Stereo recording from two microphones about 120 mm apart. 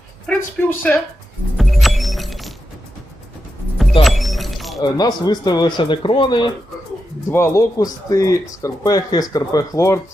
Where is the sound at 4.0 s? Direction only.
Centre (ahead or behind).